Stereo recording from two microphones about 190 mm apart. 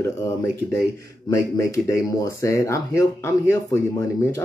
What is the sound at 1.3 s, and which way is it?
Speech, 15° left (ahead or behind).